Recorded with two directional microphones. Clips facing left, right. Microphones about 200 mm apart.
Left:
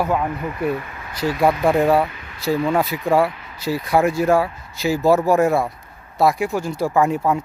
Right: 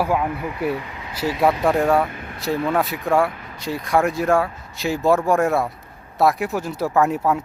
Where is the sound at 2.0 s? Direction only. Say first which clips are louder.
Right 4 dB; 50° right (ahead or behind).